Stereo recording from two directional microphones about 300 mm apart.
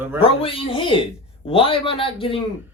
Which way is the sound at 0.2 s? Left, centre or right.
Centre.